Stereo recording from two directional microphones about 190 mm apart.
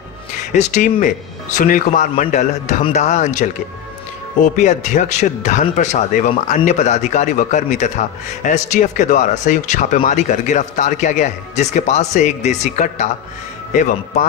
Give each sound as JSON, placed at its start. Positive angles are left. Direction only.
{"t": 0.5, "sound": "speech", "side_deg": 40}